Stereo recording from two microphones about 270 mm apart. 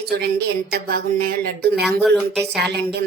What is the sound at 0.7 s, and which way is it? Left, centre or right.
Speech, right.